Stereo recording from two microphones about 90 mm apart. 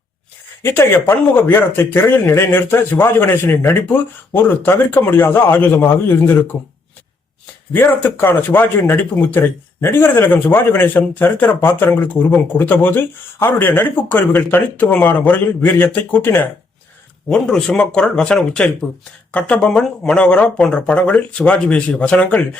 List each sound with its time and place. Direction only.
0.6 s speech: 25° left (ahead or behind)
7.7 s speech: 20° left (ahead or behind)
17.2 s speech: 5° left (ahead or behind)